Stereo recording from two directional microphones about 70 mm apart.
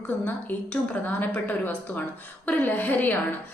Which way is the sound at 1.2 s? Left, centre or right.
Left.